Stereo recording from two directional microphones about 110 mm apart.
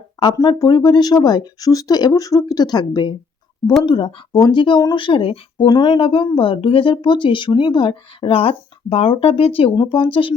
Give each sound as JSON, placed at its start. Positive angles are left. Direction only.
{"t": 0.3, "sound": "speech", "side_deg": 35}
{"t": 5.6, "sound": "speech", "side_deg": 40}
{"t": 9.7, "sound": "speech", "side_deg": 45}